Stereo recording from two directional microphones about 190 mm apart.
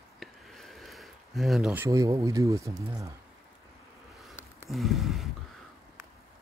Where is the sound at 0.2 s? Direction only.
Centre (ahead or behind).